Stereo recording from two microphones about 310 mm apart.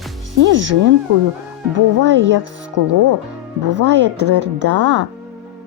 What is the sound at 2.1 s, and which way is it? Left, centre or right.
Speech, right.